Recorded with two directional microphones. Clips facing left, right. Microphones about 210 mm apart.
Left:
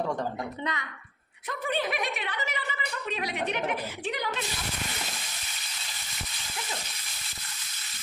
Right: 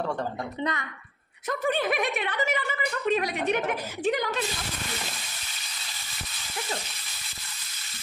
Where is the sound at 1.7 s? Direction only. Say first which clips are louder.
Right 3 dB; 50° right (ahead or behind).